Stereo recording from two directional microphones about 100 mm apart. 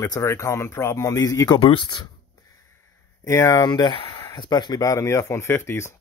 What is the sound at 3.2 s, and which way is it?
Speech, 30° left (ahead or behind).